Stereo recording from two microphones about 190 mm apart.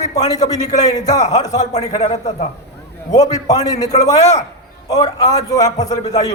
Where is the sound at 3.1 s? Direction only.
20° left (ahead or behind).